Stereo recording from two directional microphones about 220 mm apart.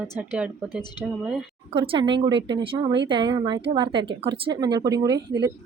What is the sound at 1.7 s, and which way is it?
A woman's voice, 25° right (ahead or behind).